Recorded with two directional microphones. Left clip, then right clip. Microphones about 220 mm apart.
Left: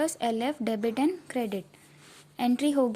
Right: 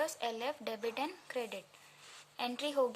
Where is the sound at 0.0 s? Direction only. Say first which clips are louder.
Left 8 dB; 25° left (ahead or behind).